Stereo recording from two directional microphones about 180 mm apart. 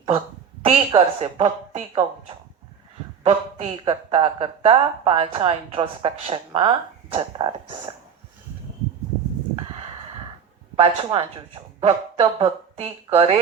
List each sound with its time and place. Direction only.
0.6 s speech: 30° right (ahead or behind)
10.8 s speech: 30° right (ahead or behind)